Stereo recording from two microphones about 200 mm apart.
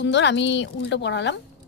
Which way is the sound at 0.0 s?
60° left (ahead or behind).